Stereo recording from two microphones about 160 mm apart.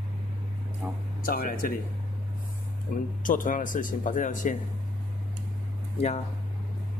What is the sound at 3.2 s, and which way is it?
Speech, 55° left (ahead or behind).